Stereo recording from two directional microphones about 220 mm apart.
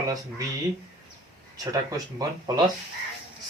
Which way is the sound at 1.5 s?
15° right (ahead or behind).